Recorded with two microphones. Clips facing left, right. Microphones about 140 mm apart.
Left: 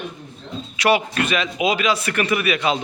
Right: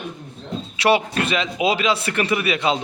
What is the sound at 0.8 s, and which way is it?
A man's voice, 30° right (ahead or behind).